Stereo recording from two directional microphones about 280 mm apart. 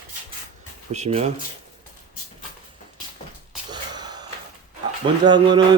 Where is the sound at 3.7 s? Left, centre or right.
Centre.